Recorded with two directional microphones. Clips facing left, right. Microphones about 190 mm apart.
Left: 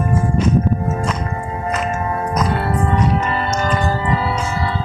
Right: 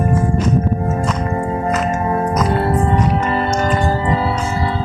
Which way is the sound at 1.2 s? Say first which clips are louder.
Right 5 dB; 35° right (ahead or behind).